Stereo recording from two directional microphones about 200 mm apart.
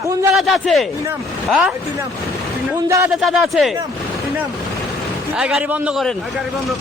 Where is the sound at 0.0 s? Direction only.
15° right (ahead or behind).